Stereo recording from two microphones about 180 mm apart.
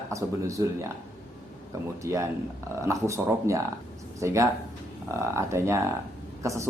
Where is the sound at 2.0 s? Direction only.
15° right (ahead or behind).